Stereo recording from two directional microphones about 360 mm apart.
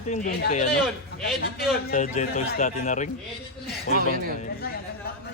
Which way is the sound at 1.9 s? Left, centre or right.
Left.